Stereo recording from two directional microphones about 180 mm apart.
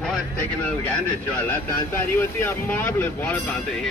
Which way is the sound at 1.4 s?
15° left (ahead or behind).